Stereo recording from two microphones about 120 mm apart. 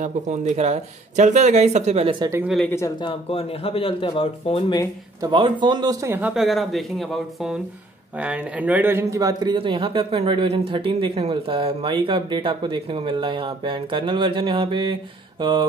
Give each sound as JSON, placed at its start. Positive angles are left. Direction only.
{"t": 0.0, "sound": "speech", "side_deg": -75}
{"t": 3.0, "sound": "speech", "side_deg": 50}
{"t": 5.2, "sound": "speech", "side_deg": -40}
{"t": 6.0, "sound": "speech", "side_deg": -20}
{"t": 6.3, "sound": "speech", "side_deg": 0}
{"t": 9.6, "sound": "speech", "side_deg": -45}